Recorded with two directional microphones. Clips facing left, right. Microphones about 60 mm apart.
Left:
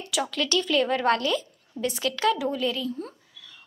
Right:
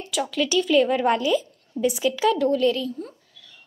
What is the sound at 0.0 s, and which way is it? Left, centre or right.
A woman's voice, centre.